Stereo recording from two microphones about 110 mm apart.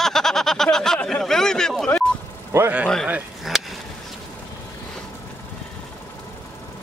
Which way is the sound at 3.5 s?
5° right (ahead or behind).